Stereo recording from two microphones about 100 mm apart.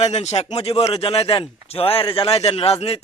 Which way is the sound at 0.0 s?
90° left.